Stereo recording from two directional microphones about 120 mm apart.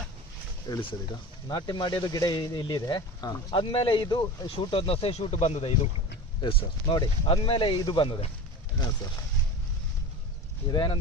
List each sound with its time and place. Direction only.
0.7 s speech: 30° left (ahead or behind)
4.6 s speech: 50° left (ahead or behind)
6.4 s speech: 45° left (ahead or behind)
10.7 s speech: 40° left (ahead or behind)